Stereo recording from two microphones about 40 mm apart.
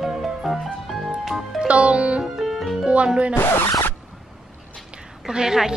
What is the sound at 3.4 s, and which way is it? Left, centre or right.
Speech, left.